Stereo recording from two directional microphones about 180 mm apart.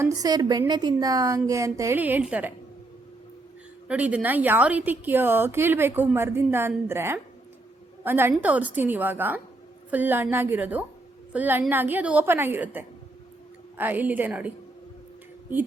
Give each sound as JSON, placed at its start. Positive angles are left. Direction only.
{"t": 0.0, "sound": "a woman's voice", "side_deg": -20}
{"t": 3.8, "sound": "a woman's voice", "side_deg": -5}